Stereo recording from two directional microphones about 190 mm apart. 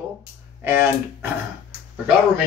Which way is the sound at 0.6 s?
10° right (ahead or behind).